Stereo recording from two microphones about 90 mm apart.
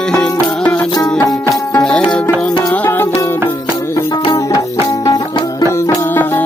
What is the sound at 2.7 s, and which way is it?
Music, 25° left (ahead or behind).